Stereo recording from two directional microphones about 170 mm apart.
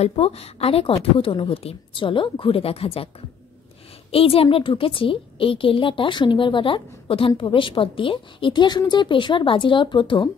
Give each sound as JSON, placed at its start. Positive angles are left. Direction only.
{"t": 0.0, "sound": "a woman's voice", "side_deg": 35}
{"t": 4.1, "sound": "a woman's voice", "side_deg": 35}